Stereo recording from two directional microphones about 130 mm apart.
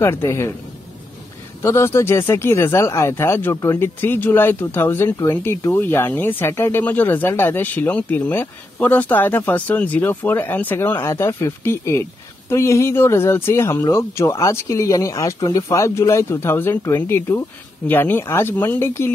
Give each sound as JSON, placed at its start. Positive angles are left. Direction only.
{"t": 0.0, "sound": "speech", "side_deg": 20}
{"t": 1.6, "sound": "speech", "side_deg": 20}